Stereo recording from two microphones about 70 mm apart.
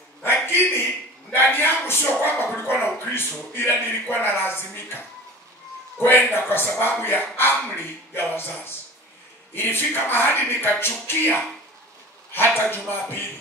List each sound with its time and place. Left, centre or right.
0.2 s a sound: left
1.3 s speech: left
12.6 s speech: left